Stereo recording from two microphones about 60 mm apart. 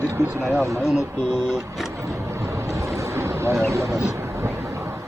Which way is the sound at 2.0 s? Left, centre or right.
Right.